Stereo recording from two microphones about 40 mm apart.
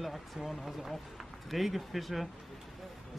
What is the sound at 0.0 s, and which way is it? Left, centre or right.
Speech, centre.